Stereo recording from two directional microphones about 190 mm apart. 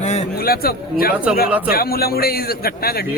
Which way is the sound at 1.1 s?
5° right (ahead or behind).